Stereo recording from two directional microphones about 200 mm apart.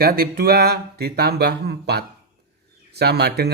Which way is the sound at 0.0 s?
50° right (ahead or behind).